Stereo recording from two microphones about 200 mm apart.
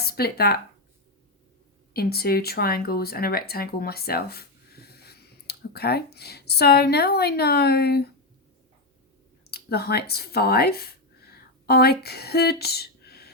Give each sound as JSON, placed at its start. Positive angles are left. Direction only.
{"t": 0.0, "sound": "speech", "side_deg": 50}
{"t": 1.9, "sound": "speech", "side_deg": 50}
{"t": 9.5, "sound": "speech", "side_deg": 50}